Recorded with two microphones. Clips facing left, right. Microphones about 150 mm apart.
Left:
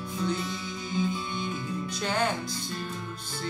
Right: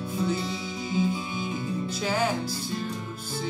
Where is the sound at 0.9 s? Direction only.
10° right (ahead or behind).